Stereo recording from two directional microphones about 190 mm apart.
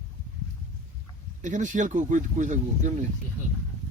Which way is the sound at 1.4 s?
40° right (ahead or behind).